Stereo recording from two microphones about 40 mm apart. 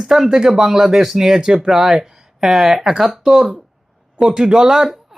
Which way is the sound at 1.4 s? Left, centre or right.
Centre.